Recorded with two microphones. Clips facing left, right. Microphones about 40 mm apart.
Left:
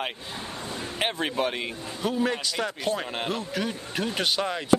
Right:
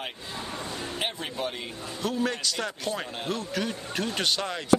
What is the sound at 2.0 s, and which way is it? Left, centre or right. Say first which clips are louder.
Speech: left 2 dB; centre.